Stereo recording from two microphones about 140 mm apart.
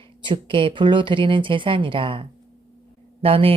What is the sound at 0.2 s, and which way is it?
Speech, 35° right (ahead or behind).